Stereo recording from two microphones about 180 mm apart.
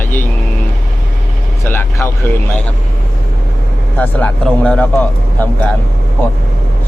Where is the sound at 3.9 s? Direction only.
10° left (ahead or behind).